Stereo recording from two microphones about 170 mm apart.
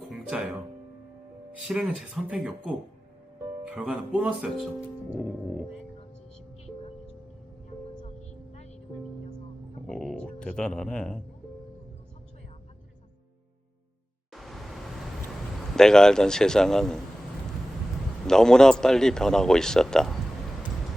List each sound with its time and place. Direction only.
0.1 s music: 5° right (ahead or behind)
1.6 s a man's voice: 5° right (ahead or behind)
8.0 s music: 40° left (ahead or behind)
9.8 s a sound: centre (ahead or behind)
14.3 s vehicle: centre (ahead or behind)
15.7 s a man's voice: 5° left (ahead or behind)
18.3 s a man's voice: 5° left (ahead or behind)